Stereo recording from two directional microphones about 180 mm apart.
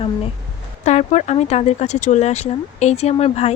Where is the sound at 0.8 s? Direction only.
40° left (ahead or behind).